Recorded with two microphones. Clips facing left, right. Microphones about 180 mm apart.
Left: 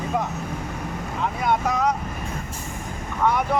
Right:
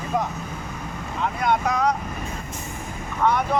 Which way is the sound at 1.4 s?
5° left (ahead or behind).